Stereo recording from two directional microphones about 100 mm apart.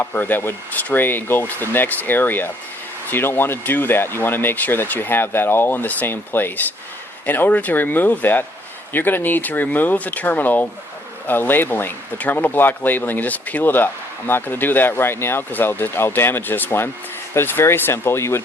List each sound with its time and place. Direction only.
0.0 s speech: 20° left (ahead or behind)